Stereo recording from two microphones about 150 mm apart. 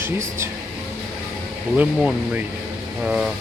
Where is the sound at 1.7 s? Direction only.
10° right (ahead or behind).